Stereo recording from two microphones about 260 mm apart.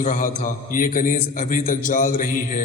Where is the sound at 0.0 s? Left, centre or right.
Left.